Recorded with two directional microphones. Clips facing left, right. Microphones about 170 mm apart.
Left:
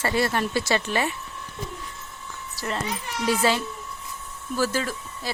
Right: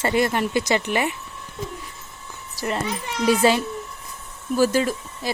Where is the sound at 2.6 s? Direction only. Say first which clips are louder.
Right 4 dB; 15° right (ahead or behind).